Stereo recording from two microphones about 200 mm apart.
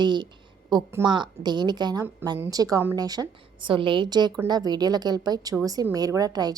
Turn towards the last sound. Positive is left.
turn(degrees=-20)  # may be behind; listen again after turning